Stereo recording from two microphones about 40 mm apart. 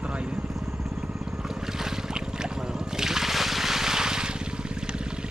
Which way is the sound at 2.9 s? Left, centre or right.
Centre.